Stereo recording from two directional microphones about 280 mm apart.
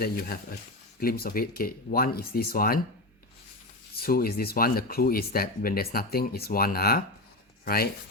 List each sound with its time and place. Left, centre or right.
0.0 s speech: left
3.9 s speech: left